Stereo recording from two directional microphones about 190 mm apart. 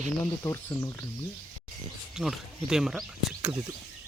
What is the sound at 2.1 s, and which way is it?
Speech, centre (ahead or behind).